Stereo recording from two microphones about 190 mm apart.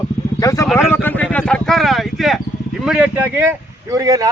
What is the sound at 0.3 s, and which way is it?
Speech, 15° left (ahead or behind).